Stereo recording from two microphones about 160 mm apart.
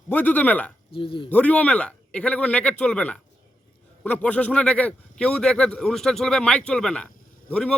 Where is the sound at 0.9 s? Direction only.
35° left (ahead or behind).